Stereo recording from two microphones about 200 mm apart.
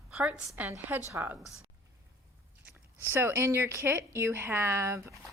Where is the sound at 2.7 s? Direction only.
10° right (ahead or behind).